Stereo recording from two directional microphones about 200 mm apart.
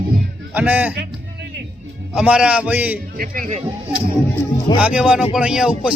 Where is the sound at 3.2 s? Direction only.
45° right (ahead or behind).